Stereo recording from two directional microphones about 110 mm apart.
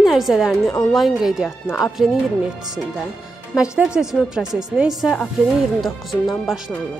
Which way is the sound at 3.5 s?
5° right (ahead or behind).